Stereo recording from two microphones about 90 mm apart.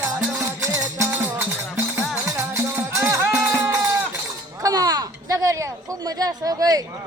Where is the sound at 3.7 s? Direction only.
35° right (ahead or behind).